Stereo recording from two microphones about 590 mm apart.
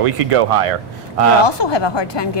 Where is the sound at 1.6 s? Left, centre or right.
Left.